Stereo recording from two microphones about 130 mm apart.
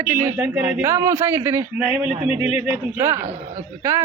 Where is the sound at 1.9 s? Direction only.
5° right (ahead or behind).